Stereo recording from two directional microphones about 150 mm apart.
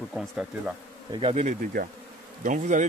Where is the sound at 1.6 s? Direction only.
75° right (ahead or behind).